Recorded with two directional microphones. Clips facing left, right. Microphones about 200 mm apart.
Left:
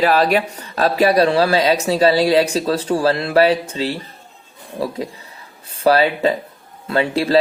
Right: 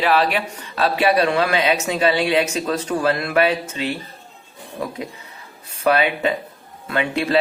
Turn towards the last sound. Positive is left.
turn(degrees=35)  # may be behind; listen again after turning